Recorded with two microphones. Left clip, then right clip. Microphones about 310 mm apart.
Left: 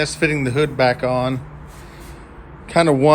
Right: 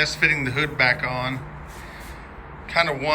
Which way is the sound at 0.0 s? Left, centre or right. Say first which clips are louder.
Left 1 dB; centre.